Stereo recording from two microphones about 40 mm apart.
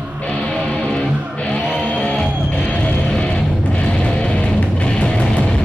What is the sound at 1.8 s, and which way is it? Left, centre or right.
Music, left.